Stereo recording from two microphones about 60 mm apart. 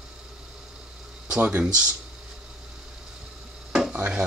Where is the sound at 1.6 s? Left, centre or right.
Centre.